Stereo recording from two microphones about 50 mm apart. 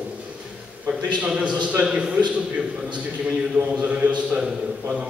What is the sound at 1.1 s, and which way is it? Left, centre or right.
A man's voice, right.